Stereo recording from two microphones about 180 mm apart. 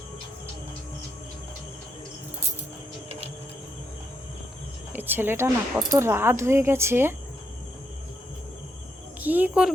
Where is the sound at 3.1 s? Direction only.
35° right (ahead or behind).